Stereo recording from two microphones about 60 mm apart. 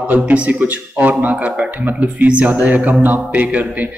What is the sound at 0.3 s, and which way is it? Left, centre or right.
Speech, right.